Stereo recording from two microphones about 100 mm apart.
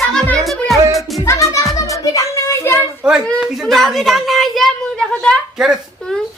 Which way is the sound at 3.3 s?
Centre (ahead or behind).